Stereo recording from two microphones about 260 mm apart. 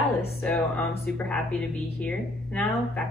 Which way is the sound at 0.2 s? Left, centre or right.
Centre.